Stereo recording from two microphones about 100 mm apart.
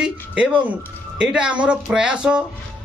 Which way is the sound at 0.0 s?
10° right (ahead or behind).